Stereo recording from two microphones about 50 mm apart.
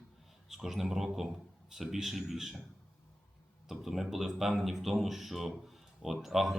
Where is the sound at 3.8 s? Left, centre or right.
Centre.